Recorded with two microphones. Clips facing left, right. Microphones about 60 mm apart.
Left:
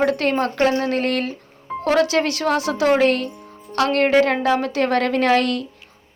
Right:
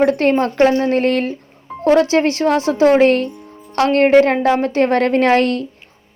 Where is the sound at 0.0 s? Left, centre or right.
Right.